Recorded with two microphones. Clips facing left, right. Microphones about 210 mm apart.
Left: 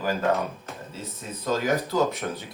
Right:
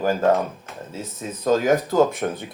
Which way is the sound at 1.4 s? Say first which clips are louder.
Right 6 dB; 45° right (ahead or behind).